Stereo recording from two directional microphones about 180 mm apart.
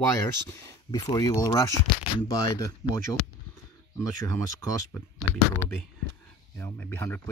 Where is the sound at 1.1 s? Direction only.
20° left (ahead or behind).